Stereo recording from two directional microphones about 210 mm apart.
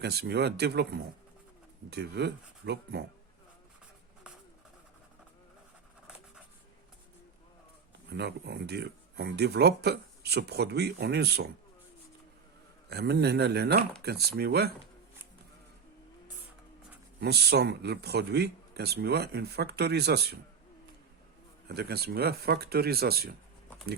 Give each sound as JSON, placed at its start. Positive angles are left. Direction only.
{"t": 0.0, "sound": "speech", "side_deg": -50}
{"t": 8.1, "sound": "speech", "side_deg": -50}
{"t": 12.9, "sound": "speech", "side_deg": -50}
{"t": 17.2, "sound": "speech", "side_deg": -50}
{"t": 21.7, "sound": "speech", "side_deg": -50}